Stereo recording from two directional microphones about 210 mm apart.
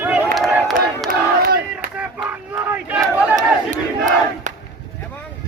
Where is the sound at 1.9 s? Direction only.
5° right (ahead or behind).